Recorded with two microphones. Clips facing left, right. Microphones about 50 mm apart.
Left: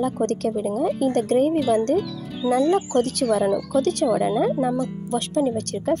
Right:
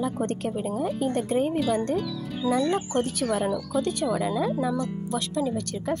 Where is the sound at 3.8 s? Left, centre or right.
Left.